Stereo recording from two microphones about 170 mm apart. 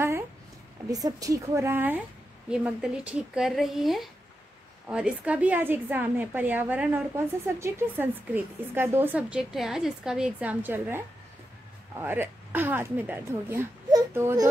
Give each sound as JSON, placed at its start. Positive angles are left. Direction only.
{"t": 0.8, "sound": "a woman's voice", "side_deg": -20}
{"t": 12.0, "sound": "a woman's voice", "side_deg": -10}